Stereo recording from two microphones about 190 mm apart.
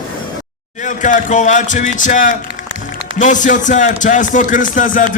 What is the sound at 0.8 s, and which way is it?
Speech, 40° left (ahead or behind).